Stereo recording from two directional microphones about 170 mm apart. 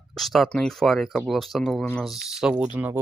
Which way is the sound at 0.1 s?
Centre (ahead or behind).